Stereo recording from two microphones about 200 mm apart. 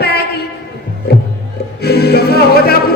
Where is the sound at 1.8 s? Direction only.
55° left (ahead or behind).